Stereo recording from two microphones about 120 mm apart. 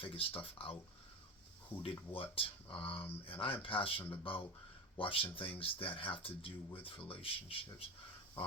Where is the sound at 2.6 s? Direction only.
10° left (ahead or behind).